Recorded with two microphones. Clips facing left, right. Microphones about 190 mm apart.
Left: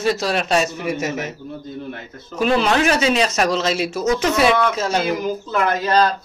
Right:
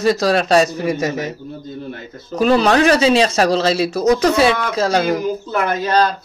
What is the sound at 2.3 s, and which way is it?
Speech, 40° right (ahead or behind).